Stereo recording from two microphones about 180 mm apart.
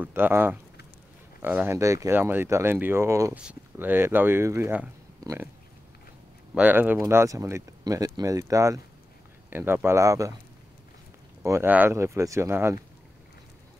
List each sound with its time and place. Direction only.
0.0 s speech: 10° right (ahead or behind)
6.5 s speech: 10° right (ahead or behind)
11.4 s speech: 15° right (ahead or behind)